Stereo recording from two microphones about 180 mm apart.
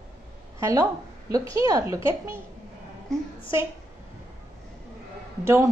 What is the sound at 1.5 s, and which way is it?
Speech, 20° right (ahead or behind).